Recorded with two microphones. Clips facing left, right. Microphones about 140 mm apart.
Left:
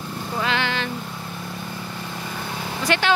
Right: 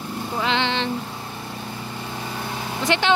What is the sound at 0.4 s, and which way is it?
Vehicle, 20° right (ahead or behind).